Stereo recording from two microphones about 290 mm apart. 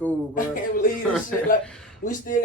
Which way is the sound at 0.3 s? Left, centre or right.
Left.